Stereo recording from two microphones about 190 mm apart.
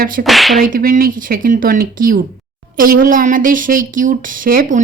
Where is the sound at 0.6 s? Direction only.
50° right (ahead or behind).